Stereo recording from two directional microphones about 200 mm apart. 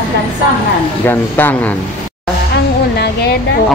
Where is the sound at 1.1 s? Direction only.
10° left (ahead or behind).